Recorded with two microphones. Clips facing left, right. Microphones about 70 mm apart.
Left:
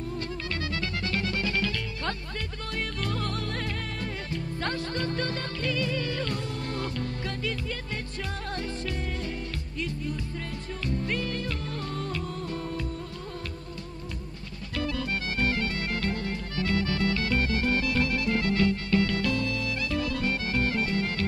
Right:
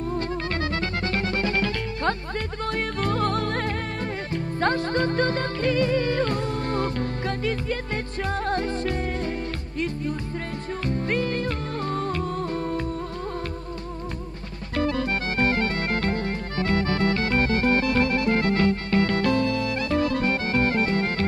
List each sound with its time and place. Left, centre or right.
0.1 s music: right
10.9 s music: right
14.8 s music: right